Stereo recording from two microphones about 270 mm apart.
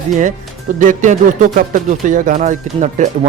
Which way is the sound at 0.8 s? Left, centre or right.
Right.